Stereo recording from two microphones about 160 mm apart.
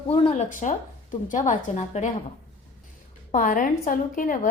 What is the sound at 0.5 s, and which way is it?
A woman's voice, 50° left (ahead or behind).